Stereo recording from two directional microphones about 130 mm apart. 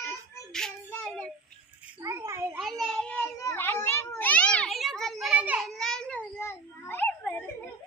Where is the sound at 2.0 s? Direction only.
20° right (ahead or behind).